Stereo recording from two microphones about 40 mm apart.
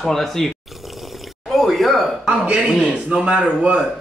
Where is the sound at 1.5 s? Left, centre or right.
Centre.